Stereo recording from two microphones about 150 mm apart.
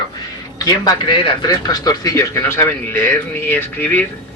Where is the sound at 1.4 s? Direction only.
25° left (ahead or behind).